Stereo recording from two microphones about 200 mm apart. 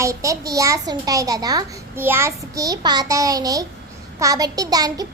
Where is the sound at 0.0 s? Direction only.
15° right (ahead or behind).